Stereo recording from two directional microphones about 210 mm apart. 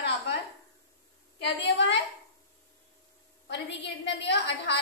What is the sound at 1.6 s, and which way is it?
Speech, 55° left (ahead or behind).